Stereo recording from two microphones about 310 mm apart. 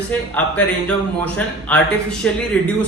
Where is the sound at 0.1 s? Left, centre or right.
Centre.